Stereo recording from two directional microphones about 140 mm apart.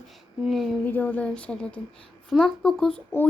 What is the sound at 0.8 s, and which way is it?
A child's voice, 10° left (ahead or behind).